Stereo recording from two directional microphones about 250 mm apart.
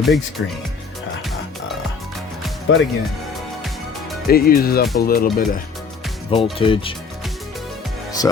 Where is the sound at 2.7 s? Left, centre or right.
Left.